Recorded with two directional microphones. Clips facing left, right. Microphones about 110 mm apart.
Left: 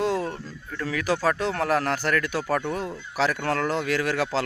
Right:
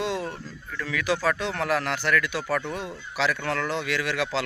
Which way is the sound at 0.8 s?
40° left (ahead or behind).